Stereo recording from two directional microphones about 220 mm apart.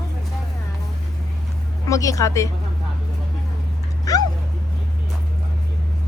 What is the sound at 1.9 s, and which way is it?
Speech, 15° left (ahead or behind).